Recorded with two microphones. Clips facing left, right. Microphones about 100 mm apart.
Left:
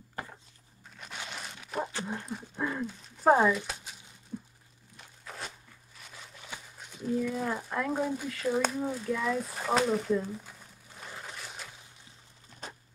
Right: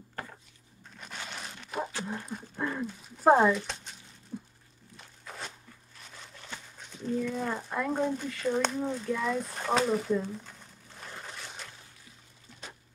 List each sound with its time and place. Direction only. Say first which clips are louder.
0.1 s a sound: left 1 dB; 5° left (ahead or behind)
0.9 s dog: even; centre (ahead or behind)
2.1 s speech: even; centre (ahead or behind)
4.3 s a sound: even; 5° right (ahead or behind)
4.9 s walk: even; centre (ahead or behind)
6.0 s speech: even; 5° left (ahead or behind)